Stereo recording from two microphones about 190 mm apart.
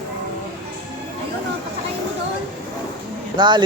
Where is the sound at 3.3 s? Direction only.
25° right (ahead or behind).